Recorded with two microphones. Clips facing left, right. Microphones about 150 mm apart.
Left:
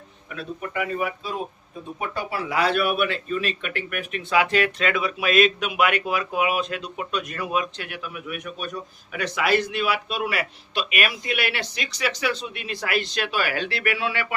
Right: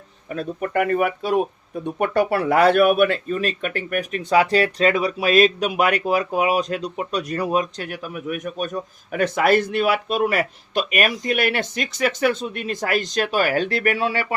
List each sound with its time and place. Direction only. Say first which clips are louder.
0.3 s speech: right 7 dB; 50° right (ahead or behind)